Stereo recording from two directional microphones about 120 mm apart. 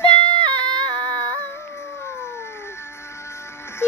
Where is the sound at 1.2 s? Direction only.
20° left (ahead or behind).